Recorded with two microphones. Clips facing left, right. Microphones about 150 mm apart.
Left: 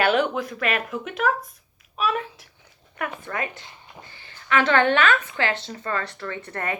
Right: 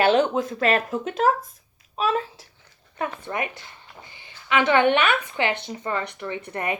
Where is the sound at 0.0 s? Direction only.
25° right (ahead or behind).